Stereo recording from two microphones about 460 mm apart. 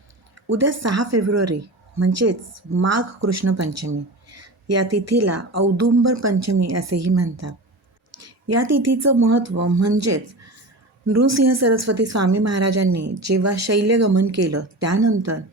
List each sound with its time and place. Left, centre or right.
0.5 s a woman's voice: right